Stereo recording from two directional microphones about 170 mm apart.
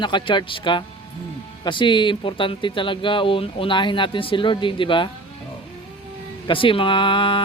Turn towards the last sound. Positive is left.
turn(degrees=30)  # may be behind; listen again after turning